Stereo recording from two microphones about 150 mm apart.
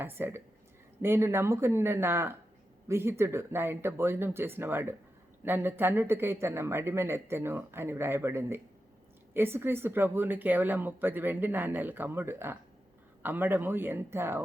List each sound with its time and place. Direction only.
0.0 s speech: 15° right (ahead or behind)